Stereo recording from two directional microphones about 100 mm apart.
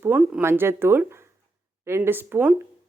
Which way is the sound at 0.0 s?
20° right (ahead or behind).